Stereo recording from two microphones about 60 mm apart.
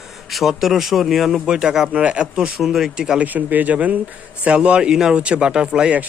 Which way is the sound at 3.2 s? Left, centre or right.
Right.